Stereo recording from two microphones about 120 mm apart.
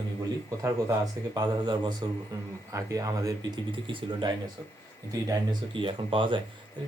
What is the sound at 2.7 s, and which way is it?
Speech, 30° right (ahead or behind).